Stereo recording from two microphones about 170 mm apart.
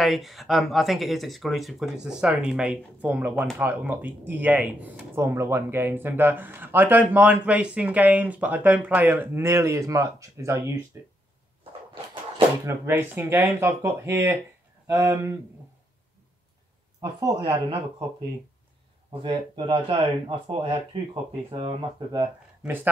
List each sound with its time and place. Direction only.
0.0 s speech: centre (ahead or behind); by 11.1 s 15° right (ahead or behind)
11.9 s a sound: 30° right (ahead or behind)
12.6 s speech: 15° right (ahead or behind)
19.2 s speech: 30° right (ahead or behind)